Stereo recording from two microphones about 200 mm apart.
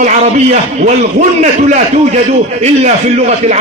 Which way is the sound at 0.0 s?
35° right (ahead or behind).